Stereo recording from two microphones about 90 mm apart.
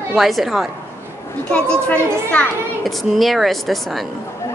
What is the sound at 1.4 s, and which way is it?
Speech, 10° left (ahead or behind).